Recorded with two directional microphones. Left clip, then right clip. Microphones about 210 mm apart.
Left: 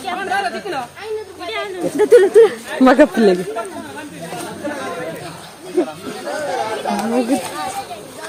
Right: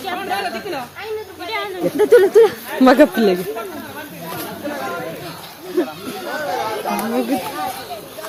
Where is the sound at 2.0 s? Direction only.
15° left (ahead or behind).